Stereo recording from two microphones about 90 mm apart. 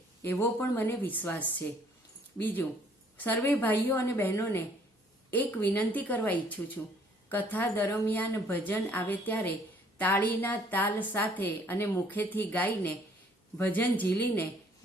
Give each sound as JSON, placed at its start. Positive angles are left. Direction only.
{"t": 0.3, "sound": "a woman's voice", "side_deg": 20}